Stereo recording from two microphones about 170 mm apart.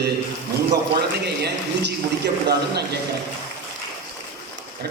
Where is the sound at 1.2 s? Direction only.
75° right (ahead or behind).